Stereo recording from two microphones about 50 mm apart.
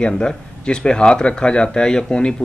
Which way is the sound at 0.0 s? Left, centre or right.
Centre.